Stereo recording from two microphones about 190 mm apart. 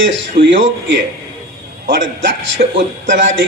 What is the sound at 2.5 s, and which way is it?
Speech, 40° right (ahead or behind).